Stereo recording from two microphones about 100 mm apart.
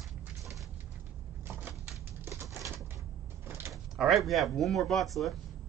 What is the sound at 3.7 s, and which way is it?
Speech, centre (ahead or behind).